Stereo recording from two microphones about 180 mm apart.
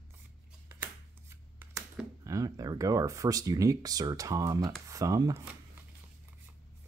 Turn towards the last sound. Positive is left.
turn(degrees=-20)  # may be behind; listen again after turning